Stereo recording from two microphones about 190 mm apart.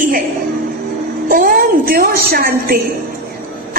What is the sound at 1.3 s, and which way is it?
A woman's voice, 45° right (ahead or behind).